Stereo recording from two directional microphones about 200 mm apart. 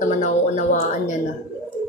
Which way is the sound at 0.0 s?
40° left (ahead or behind).